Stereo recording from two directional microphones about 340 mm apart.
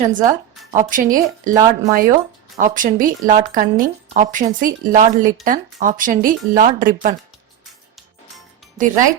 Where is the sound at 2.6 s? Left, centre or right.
Right.